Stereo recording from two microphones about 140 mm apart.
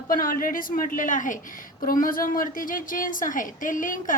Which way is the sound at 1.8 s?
85° left.